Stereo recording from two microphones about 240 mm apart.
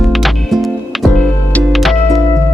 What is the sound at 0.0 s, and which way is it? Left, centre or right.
Music, centre.